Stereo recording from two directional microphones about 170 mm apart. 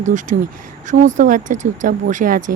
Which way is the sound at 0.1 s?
50° right (ahead or behind).